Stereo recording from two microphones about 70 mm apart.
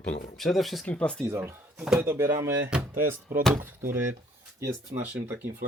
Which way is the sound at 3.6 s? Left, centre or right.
Right.